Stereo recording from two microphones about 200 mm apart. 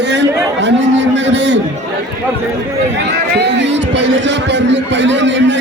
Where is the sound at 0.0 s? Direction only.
60° right (ahead or behind).